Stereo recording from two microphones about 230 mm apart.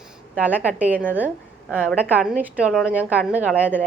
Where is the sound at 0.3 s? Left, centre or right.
Centre.